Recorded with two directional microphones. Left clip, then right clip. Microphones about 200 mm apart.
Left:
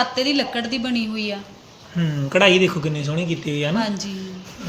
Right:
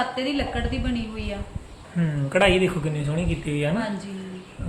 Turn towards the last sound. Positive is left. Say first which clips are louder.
# left 4 dB
turn(degrees=40)  # may be behind; listen again after turning